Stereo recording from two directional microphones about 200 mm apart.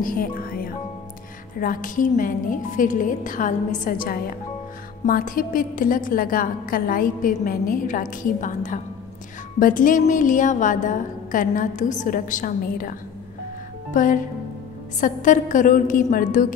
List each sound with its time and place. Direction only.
0.0 s music: 45° left (ahead or behind)
1.6 s a woman's voice: 45° left (ahead or behind)
13.9 s a woman's voice: 40° left (ahead or behind)